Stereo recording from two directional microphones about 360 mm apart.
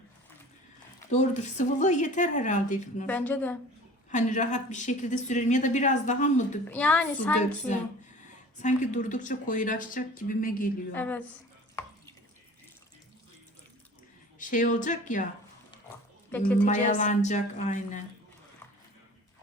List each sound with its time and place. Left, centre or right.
1.1 s a woman's voice: centre
3.1 s a woman's voice: centre
4.1 s a woman's voice: centre
6.7 s a woman's voice: centre
8.5 s a woman's voice: left
10.9 s a woman's voice: centre
14.3 s a woman's voice: left
16.6 s a woman's voice: left